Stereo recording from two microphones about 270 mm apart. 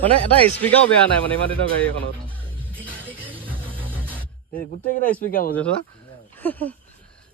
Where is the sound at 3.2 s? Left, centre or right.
Centre.